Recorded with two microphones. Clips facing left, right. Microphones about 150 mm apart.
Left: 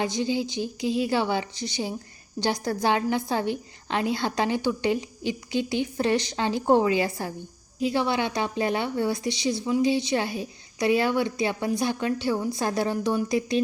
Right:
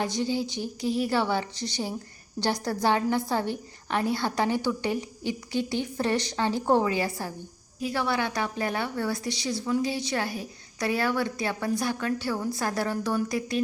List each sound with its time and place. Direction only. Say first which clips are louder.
0.0 s a woman's voice: left 2 dB; 15° left (ahead or behind)